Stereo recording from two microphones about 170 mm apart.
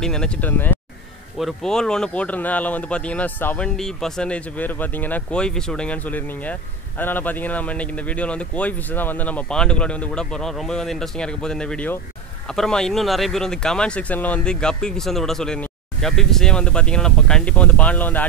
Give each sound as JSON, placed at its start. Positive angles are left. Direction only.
{"t": 0.0, "sound": "speech", "side_deg": 5}